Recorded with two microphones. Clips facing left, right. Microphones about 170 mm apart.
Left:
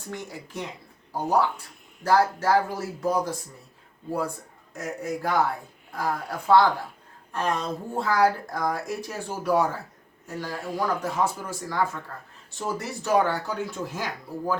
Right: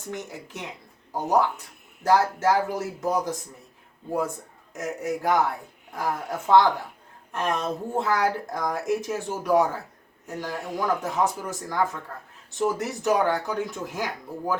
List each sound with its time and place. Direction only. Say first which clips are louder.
0.1 s speech: right 1 dB; 20° right (ahead or behind)
4.7 s speech: right 2 dB; 20° right (ahead or behind)